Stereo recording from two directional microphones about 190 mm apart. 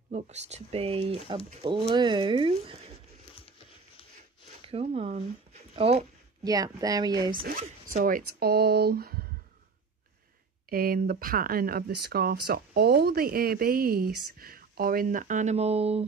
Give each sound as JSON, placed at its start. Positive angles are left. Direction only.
{"t": 0.1, "sound": "speech", "side_deg": -35}
{"t": 3.3, "sound": "a sound", "side_deg": 30}
{"t": 4.6, "sound": "speech", "side_deg": -30}
{"t": 6.4, "sound": "speech", "side_deg": -20}
{"t": 7.4, "sound": "speech", "side_deg": -50}
{"t": 10.7, "sound": "speech", "side_deg": -50}